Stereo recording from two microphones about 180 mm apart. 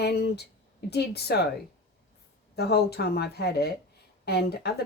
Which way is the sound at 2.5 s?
65° left (ahead or behind).